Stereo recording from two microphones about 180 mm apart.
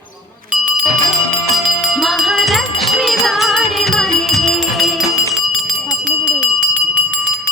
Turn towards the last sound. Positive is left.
turn(degrees=-10)  # may be behind; listen again after turning